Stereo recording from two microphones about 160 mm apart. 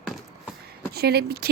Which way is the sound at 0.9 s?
85° right.